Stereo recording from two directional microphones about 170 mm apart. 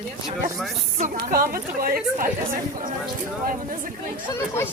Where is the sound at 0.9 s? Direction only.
55° right (ahead or behind).